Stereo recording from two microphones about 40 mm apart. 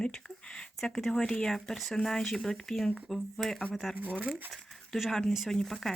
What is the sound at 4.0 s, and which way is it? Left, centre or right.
Speech, right.